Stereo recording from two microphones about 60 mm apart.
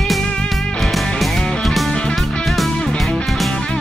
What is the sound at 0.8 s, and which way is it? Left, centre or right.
Music, centre.